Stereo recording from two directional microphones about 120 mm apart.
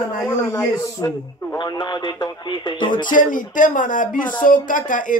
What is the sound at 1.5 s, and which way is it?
Speech, 40° left (ahead or behind).